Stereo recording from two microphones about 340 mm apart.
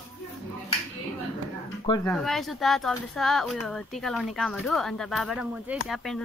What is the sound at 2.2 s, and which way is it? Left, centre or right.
Speech, centre.